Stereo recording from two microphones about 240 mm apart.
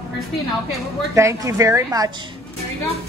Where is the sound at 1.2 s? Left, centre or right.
Centre.